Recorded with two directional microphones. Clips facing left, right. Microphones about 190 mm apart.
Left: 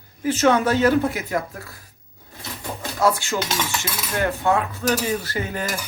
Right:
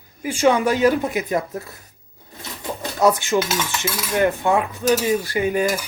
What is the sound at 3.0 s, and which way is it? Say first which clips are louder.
Dishes: right 4 dB; 20° right (ahead or behind).